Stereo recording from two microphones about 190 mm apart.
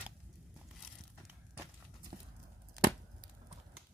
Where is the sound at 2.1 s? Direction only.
35° right (ahead or behind).